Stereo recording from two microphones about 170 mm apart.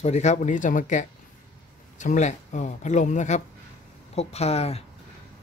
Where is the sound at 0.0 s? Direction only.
40° left (ahead or behind).